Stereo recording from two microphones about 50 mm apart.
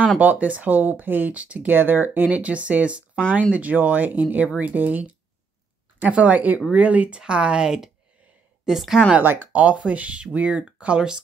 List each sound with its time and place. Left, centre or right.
0.2 s speech: right
1.3 s speech: right
1.7 s speech: right
2.3 s speech: right; by 9.0 s centre
9.2 s speech: right
9.5 s speech: right